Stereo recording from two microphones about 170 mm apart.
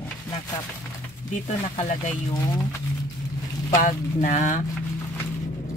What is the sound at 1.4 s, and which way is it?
Speech, 40° left (ahead or behind).